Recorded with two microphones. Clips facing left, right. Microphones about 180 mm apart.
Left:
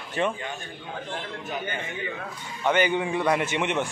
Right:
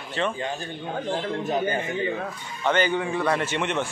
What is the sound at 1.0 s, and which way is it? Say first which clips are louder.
A man's voice: right 10 dB; 35° right (ahead or behind).